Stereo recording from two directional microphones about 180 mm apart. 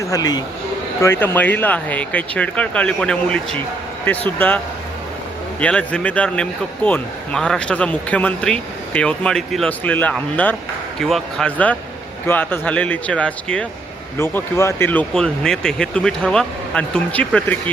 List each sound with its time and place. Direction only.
0.0 s speech: 20° left (ahead or behind)